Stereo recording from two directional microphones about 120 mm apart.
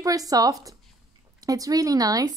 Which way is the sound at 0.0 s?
30° right (ahead or behind).